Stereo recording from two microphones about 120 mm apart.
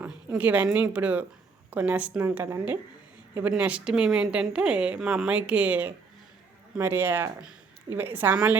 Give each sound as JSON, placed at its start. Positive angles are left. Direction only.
{"t": 0.0, "sound": "speech", "side_deg": -15}